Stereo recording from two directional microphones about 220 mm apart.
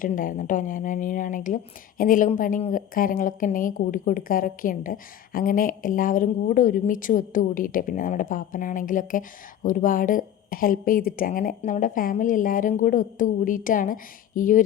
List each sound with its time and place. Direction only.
0.0 s a woman's voice: 40° left (ahead or behind)